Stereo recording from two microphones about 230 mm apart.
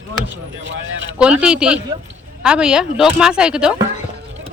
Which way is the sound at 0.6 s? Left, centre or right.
Right.